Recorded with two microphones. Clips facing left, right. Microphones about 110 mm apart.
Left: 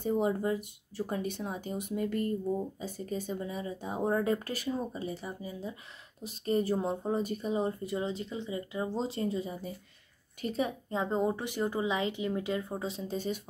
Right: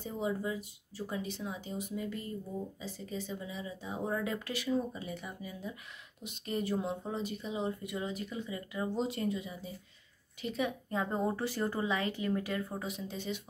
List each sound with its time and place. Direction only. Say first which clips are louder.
0.0 s speech: left 6 dB; 50° left (ahead or behind); by 11.0 s 35° left (ahead or behind)
11.0 s speech: left 3 dB; 20° left (ahead or behind); by 13.4 s 40° left (ahead or behind)